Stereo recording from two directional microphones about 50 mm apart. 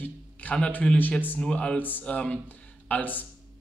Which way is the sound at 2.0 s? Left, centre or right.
Left.